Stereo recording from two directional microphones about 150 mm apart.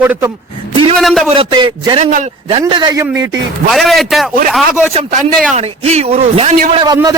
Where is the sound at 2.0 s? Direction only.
55° right (ahead or behind).